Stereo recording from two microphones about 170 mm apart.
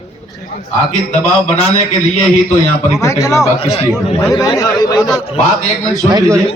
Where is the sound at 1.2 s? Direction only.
35° left (ahead or behind).